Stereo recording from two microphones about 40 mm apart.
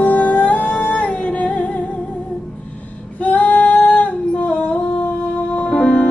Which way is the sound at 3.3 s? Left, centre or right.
Left.